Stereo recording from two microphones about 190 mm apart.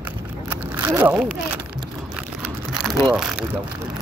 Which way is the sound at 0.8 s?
10° right (ahead or behind).